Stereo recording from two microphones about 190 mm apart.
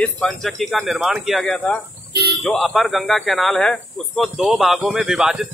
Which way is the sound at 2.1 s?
60° right (ahead or behind).